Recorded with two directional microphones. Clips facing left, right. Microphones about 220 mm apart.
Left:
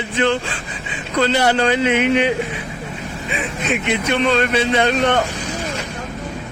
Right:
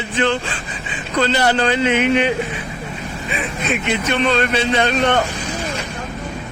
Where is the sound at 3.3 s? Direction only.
15° left (ahead or behind).